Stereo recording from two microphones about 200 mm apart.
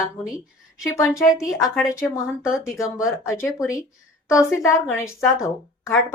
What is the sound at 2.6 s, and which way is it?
Speech, 15° left (ahead or behind).